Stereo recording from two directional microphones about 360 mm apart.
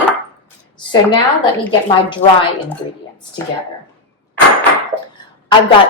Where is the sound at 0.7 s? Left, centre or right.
Centre.